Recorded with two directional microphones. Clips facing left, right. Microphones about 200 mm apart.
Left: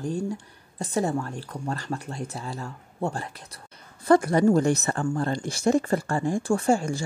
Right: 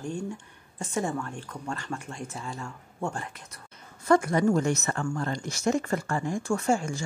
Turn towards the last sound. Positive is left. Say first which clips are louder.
# left 3 dB
turn(degrees=35)  # may be behind; listen again after turning